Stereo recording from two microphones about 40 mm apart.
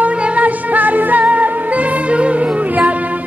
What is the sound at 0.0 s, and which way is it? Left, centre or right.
Music, right.